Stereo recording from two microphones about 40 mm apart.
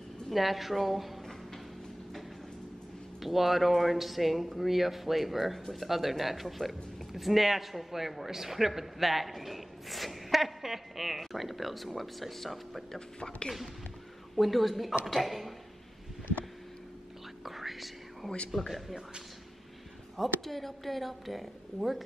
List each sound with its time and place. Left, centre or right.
0.3 s speech: centre
3.2 s speech: centre
14.3 s speech: centre
17.5 s whispering: centre
18.7 s speech: centre
20.2 s speech: centre